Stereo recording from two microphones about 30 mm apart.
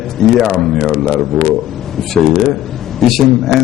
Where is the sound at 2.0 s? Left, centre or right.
Centre.